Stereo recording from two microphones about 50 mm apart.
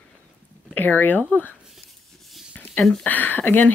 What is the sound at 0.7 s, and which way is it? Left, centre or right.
Speech, left.